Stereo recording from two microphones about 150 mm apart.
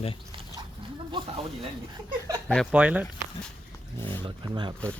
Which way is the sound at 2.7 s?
10° right (ahead or behind).